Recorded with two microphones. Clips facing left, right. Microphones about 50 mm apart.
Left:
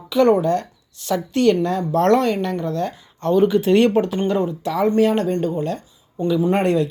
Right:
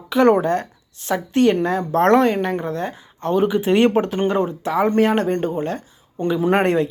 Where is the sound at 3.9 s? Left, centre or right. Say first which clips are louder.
Even; right.